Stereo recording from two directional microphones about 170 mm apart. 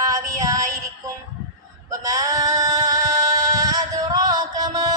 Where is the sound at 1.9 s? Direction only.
20° right (ahead or behind).